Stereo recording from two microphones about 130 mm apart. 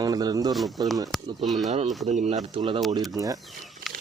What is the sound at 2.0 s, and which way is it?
Speech, 60° right (ahead or behind).